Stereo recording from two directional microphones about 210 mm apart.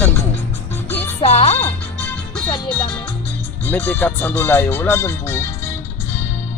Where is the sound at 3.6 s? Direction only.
10° left (ahead or behind).